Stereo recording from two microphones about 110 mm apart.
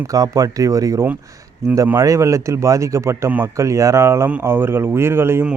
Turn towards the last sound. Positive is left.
turn(degrees=-20)  # may be behind; listen again after turning